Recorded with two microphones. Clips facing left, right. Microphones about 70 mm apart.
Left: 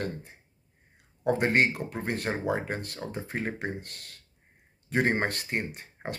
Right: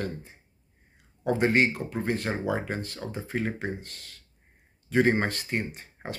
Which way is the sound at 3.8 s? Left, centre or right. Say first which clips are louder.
Left 1 dB; left.